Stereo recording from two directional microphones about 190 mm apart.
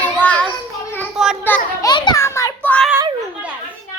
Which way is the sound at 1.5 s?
20° left (ahead or behind).